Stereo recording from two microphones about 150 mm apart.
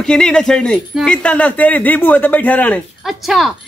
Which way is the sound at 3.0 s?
Centre (ahead or behind).